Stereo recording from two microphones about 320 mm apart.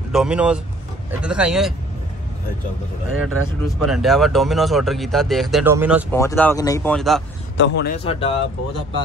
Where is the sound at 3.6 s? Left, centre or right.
Centre.